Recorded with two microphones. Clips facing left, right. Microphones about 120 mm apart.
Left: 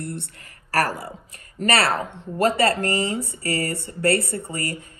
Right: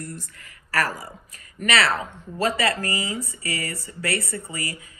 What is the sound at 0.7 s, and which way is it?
Speech, 30° left (ahead or behind).